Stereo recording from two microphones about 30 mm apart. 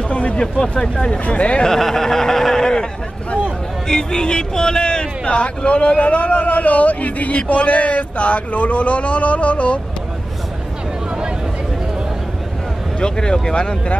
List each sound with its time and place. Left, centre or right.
0.1 s speech: left
1.7 s speech: centre; by 9.8 s left
13.0 s speech: left